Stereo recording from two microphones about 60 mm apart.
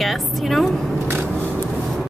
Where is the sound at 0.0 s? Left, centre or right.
Centre.